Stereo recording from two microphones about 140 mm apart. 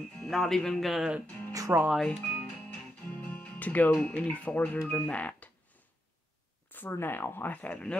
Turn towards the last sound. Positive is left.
turn(degrees=10)  # may be behind; listen again after turning